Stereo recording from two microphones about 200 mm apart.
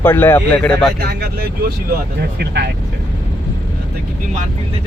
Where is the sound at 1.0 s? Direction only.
50° right (ahead or behind).